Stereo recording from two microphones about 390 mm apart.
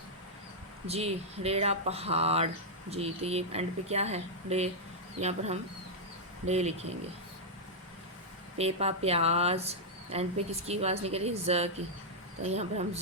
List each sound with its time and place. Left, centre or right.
0.9 s speech: centre
8.5 s speech: centre